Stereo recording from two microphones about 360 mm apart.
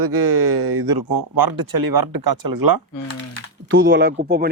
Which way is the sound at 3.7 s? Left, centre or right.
Right.